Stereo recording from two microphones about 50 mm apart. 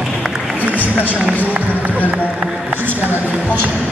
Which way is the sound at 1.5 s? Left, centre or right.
Right.